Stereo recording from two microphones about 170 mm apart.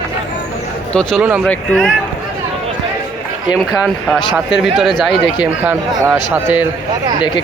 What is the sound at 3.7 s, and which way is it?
Speech, centre (ahead or behind).